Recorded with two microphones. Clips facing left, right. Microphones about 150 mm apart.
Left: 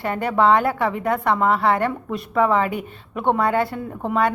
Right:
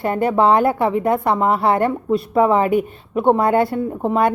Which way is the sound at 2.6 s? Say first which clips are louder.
Right 9 dB; 50° right (ahead or behind).